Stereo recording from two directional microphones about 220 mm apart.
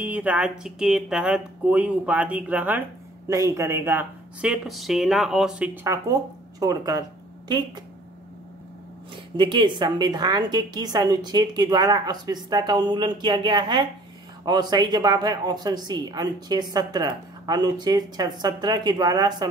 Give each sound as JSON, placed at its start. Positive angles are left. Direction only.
{"t": 0.0, "sound": "a woman's voice", "side_deg": -5}
{"t": 6.6, "sound": "speech", "side_deg": -15}
{"t": 9.1, "sound": "a woman's voice", "side_deg": -20}